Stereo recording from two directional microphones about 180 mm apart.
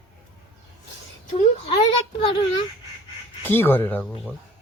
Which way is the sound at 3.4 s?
10° left (ahead or behind).